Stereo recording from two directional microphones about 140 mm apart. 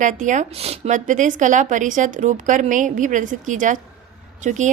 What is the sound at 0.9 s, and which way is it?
A woman's voice, 65° right (ahead or behind).